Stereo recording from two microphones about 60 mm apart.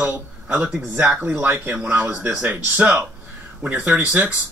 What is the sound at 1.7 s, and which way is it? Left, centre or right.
Speech, centre.